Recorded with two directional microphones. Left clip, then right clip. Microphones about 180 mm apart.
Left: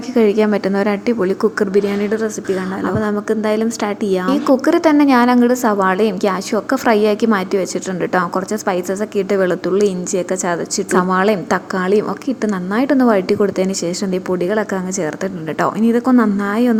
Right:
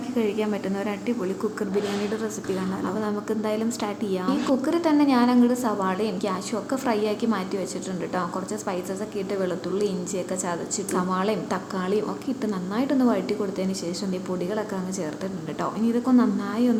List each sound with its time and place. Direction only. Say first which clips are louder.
0.1 s a woman's voice: left 12 dB; 45° left (ahead or behind)
15.6 s a woman's voice: left 10 dB; 45° left (ahead or behind)